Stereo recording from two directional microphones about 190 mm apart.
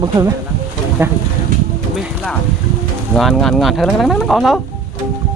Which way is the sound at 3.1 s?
Centre (ahead or behind).